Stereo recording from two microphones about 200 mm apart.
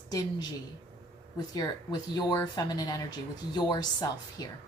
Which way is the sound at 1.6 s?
20° left (ahead or behind).